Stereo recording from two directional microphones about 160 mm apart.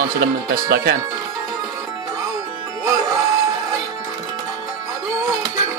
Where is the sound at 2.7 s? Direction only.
20° right (ahead or behind).